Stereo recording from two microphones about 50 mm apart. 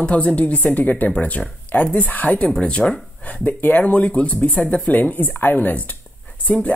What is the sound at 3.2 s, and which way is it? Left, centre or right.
Speech, left.